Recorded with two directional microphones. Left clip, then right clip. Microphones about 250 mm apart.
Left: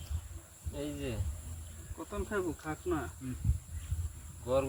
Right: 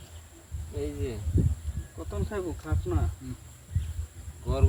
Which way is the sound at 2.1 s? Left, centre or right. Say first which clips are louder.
Right 2 dB; centre.